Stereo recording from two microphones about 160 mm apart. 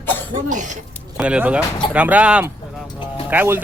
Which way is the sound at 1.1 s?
5° right (ahead or behind).